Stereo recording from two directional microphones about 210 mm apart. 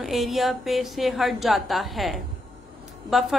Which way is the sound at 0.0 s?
Centre (ahead or behind).